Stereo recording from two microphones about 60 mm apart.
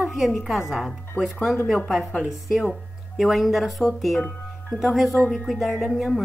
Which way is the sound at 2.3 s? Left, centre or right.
Centre.